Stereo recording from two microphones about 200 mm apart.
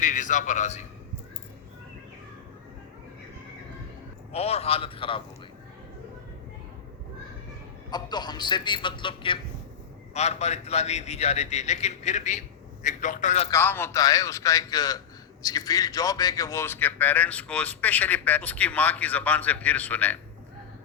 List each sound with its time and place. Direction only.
0.0 s a man's voice: 40° left (ahead or behind)
4.3 s a man's voice: 30° left (ahead or behind)
7.9 s a man's voice: 20° left (ahead or behind)
13.5 s a man's voice: 10° left (ahead or behind)